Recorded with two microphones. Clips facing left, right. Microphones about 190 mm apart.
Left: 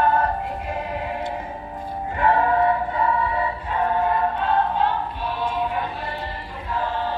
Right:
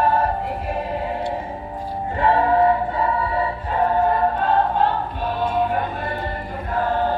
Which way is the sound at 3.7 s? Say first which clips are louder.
Right 3 dB; 40° right (ahead or behind).